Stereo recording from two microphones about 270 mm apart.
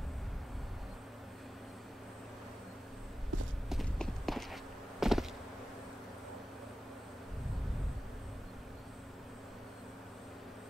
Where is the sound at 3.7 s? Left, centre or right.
Centre.